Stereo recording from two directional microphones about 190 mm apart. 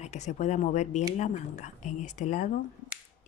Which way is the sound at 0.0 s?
35° left (ahead or behind).